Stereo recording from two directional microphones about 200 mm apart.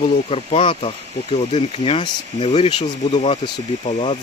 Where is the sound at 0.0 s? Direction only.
30° left (ahead or behind).